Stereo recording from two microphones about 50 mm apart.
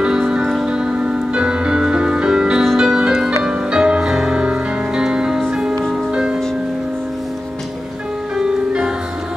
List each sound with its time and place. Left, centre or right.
0.0 s music: centre
8.4 s music: centre